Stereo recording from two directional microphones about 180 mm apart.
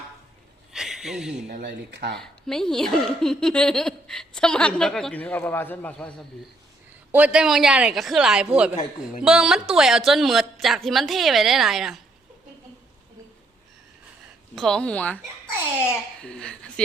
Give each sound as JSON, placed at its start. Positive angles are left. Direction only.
{"t": 0.7, "sound": "a sound", "side_deg": 0}
{"t": 1.5, "sound": "speech", "side_deg": -50}
{"t": 1.9, "sound": "speech", "side_deg": -70}
{"t": 2.1, "sound": "speech", "side_deg": 5}
{"t": 7.1, "sound": "speech", "side_deg": -5}
{"t": 14.5, "sound": "speech", "side_deg": 5}